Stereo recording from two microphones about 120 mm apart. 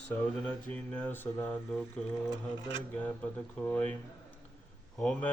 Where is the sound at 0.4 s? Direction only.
10° left (ahead or behind).